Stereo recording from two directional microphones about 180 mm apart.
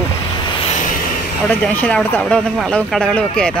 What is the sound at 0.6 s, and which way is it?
Vehicle, 40° left (ahead or behind).